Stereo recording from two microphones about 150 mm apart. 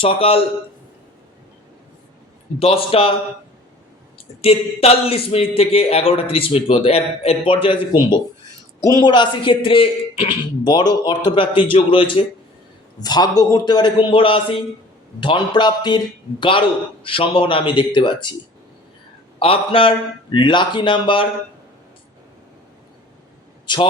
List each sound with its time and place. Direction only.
0.0 s speech: 40° left (ahead or behind)
2.6 s speech: 40° left (ahead or behind)
4.4 s a man's voice: 40° left (ahead or behind)
19.4 s speech: 35° left (ahead or behind)
23.7 s speech: 30° left (ahead or behind)